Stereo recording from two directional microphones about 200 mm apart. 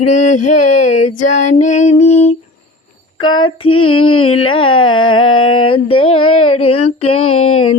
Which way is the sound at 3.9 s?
25° left (ahead or behind).